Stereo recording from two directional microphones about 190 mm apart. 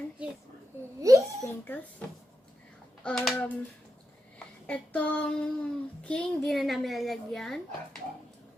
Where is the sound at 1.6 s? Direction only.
10° left (ahead or behind).